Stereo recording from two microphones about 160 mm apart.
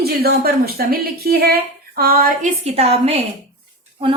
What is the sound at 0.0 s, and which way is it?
A woman's voice, 75° right (ahead or behind).